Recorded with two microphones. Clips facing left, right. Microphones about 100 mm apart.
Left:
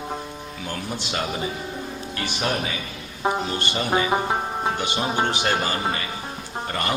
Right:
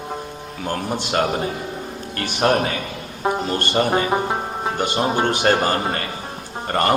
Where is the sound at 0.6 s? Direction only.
45° right (ahead or behind).